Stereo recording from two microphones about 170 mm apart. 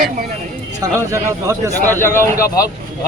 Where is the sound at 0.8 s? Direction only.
15° right (ahead or behind).